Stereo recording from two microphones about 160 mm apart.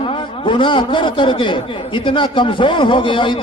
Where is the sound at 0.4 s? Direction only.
30° left (ahead or behind).